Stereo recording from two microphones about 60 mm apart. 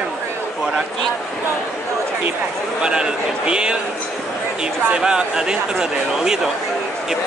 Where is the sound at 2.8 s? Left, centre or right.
Centre.